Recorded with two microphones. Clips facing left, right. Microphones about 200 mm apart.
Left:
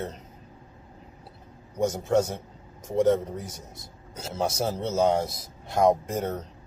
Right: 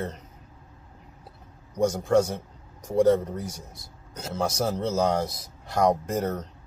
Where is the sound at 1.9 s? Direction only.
25° left (ahead or behind).